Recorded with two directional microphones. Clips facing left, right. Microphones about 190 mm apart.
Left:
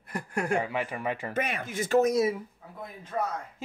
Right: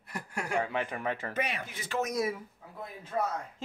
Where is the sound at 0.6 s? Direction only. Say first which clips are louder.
Left 2 dB; 10° left (ahead or behind).